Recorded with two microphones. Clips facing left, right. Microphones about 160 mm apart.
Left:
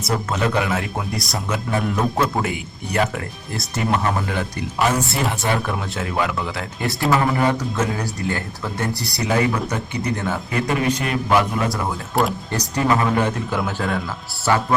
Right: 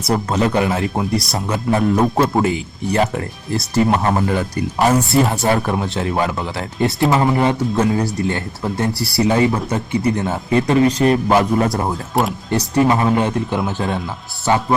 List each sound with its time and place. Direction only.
0.3 s speech: 30° right (ahead or behind)
6.8 s speech: 25° right (ahead or behind)
12.1 s speech: centre (ahead or behind)
12.5 s speech: 25° right (ahead or behind)